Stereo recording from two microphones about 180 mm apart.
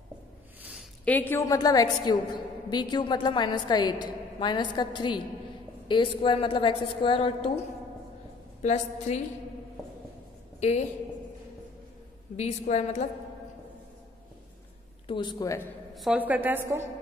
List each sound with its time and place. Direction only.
0.6 s a sound: 5° right (ahead or behind)
1.0 s a woman's voice: 10° left (ahead or behind); by 7.6 s 35° left (ahead or behind)
8.6 s a woman's voice: 40° left (ahead or behind)
12.4 s a woman's voice: 40° left (ahead or behind)
15.0 s a woman's voice: 25° left (ahead or behind)
15.9 s a woman's voice: centre (ahead or behind)